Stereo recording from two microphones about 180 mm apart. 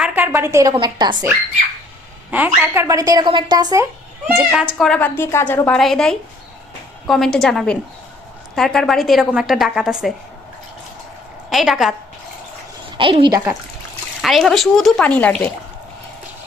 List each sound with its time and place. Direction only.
0.0 s a woman's voice: 10° right (ahead or behind)
2.3 s a woman's voice: 10° right (ahead or behind)
4.8 s a woman's voice: 5° left (ahead or behind)
11.4 s a woman's voice: centre (ahead or behind)
13.0 s a woman's voice: 30° right (ahead or behind)
14.2 s a woman's voice: centre (ahead or behind)